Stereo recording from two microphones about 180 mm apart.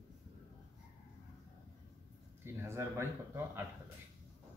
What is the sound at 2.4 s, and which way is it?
Speech, 15° right (ahead or behind).